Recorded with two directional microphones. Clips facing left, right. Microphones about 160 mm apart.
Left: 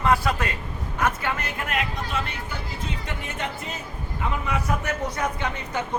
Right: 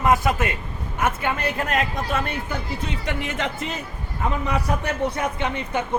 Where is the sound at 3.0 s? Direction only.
90° right.